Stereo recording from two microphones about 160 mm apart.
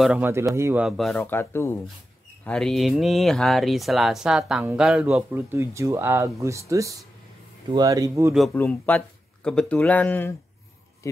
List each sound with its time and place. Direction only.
0.0 s a man's voice: 10° right (ahead or behind)
0.8 s speech: centre (ahead or behind)
1.1 s speech: 15° left (ahead or behind)
2.4 s speech: 5° left (ahead or behind); by 8.3 s 20° right (ahead or behind)
8.5 s speech: 10° left (ahead or behind)